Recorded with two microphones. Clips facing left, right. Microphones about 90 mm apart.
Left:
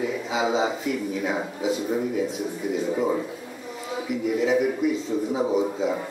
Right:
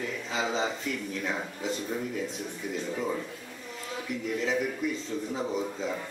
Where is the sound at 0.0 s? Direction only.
10° left (ahead or behind).